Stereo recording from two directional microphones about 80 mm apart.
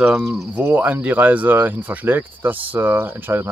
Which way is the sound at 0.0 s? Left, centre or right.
Centre.